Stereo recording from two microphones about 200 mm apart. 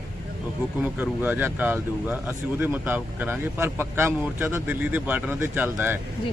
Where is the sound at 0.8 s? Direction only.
10° right (ahead or behind).